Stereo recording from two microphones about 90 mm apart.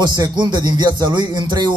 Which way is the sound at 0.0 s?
50° right (ahead or behind).